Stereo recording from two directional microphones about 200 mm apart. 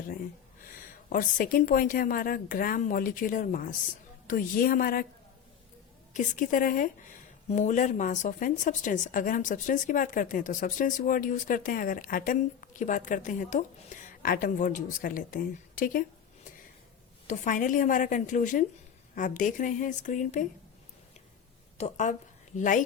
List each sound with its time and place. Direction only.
1.1 s a woman's voice: 40° left (ahead or behind)
6.1 s a woman's voice: 40° left (ahead or behind)
17.2 s a woman's voice: 40° left (ahead or behind)
21.8 s a woman's voice: 35° left (ahead or behind)